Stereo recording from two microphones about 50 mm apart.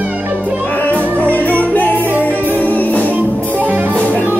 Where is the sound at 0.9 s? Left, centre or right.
Left.